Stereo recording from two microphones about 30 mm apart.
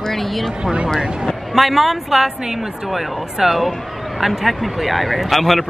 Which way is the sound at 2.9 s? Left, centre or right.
Centre.